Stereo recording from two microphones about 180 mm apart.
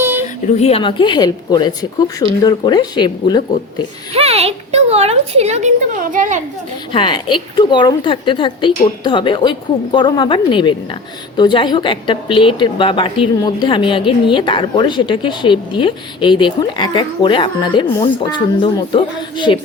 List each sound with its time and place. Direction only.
0.0 s a sound: 10° right (ahead or behind)
0.4 s a woman's voice: 35° left (ahead or behind)
4.1 s speech: 35° right (ahead or behind)
6.9 s a woman's voice: 25° left (ahead or behind)